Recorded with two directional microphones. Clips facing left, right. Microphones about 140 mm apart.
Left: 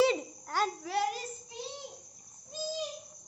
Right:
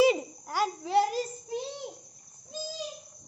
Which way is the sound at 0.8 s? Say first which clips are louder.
Right 6 dB; 30° right (ahead or behind).